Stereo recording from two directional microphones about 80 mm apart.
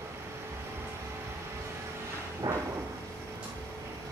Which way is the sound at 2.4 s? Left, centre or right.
Right.